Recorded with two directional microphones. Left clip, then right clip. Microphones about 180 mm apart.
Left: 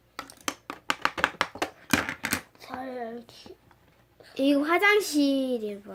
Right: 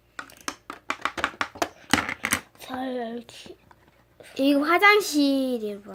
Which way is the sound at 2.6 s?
50° right (ahead or behind).